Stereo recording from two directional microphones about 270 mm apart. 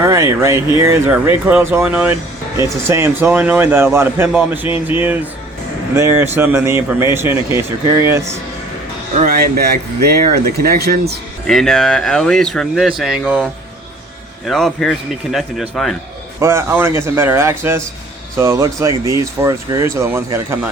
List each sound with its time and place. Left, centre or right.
0.0 s a man's voice: centre
9.1 s speech: right
11.4 s a man's voice: centre
16.4 s speech: centre